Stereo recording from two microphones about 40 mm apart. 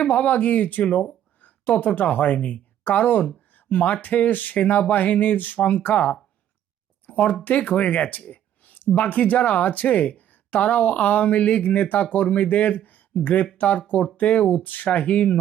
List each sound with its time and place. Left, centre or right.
0.1 s speech: left
1.4 s a sound: left
1.7 s speech: left